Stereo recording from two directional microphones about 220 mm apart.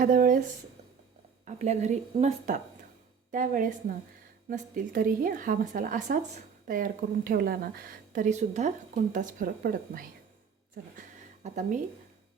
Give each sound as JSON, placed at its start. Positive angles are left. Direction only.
{"t": 0.0, "sound": "speech", "side_deg": -40}
{"t": 1.5, "sound": "speech", "side_deg": -30}
{"t": 11.4, "sound": "speech", "side_deg": -30}